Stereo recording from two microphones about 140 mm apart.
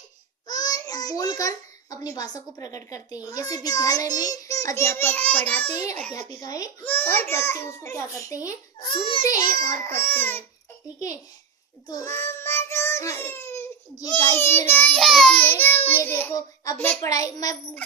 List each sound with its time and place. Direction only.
0.4 s a child's voice: 25° left (ahead or behind); by 5.6 s 10° left (ahead or behind)
6.1 s a child's voice: 25° left (ahead or behind)
6.8 s a child's voice: 15° left (ahead or behind)
8.9 s a child's voice: 40° left (ahead or behind)
9.6 s a child's voice: 20° left (ahead or behind)
11.9 s child singing: 20° left (ahead or behind)
14.1 s a child's voice: 15° left (ahead or behind)
14.9 s a child's voice: centre (ahead or behind); by 17.6 s 25° left (ahead or behind)